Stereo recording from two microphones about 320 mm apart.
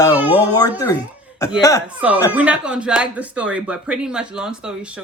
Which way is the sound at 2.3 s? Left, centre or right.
Centre.